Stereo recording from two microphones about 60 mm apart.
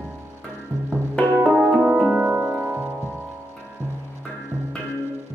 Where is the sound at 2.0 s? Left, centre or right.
Right.